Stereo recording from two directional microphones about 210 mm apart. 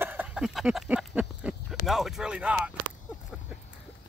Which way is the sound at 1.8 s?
Centre (ahead or behind).